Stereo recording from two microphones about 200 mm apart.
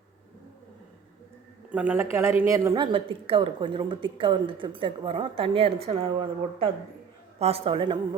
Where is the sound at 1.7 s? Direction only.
10° right (ahead or behind).